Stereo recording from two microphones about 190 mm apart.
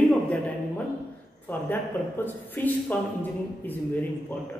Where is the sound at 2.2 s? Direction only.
10° left (ahead or behind).